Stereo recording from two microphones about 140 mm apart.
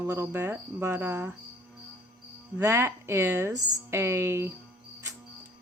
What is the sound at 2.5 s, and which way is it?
Speech, 20° right (ahead or behind).